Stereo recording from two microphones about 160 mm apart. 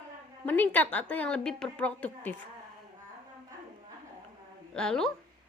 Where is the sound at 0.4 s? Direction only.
10° left (ahead or behind).